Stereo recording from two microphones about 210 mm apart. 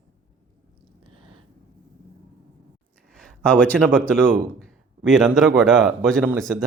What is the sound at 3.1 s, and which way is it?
Speech, 5° left (ahead or behind).